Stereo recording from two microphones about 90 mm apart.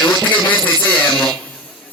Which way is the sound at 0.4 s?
20° left (ahead or behind).